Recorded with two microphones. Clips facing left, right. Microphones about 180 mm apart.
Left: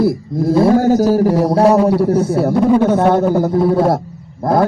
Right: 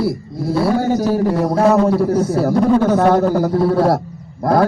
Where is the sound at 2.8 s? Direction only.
25° left (ahead or behind).